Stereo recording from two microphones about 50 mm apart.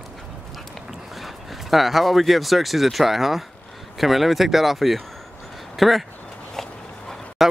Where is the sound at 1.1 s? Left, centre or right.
Centre.